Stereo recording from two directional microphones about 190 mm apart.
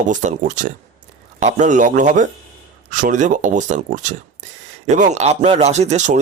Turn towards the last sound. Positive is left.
turn(degrees=-40)  # may be behind; listen again after turning